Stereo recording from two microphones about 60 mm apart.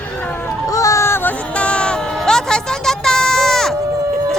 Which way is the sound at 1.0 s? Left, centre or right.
Left.